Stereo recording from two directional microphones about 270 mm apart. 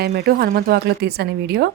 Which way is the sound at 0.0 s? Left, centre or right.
Right.